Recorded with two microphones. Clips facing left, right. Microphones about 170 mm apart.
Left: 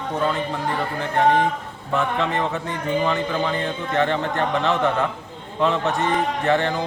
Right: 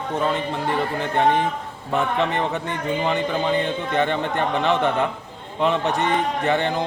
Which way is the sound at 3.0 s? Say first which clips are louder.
Right 3 dB; 20° right (ahead or behind).